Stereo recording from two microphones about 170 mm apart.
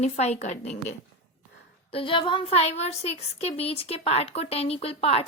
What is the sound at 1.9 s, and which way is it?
Speech, 30° left (ahead or behind).